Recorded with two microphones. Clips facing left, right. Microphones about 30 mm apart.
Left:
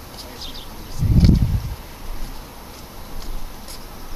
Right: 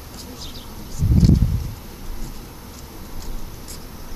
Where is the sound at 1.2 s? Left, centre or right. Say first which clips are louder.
Even; left.